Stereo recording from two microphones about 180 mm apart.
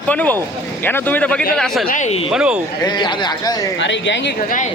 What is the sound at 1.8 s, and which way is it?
Speech, 45° left (ahead or behind).